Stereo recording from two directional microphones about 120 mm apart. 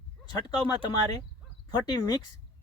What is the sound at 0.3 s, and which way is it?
Speech, 35° left (ahead or behind).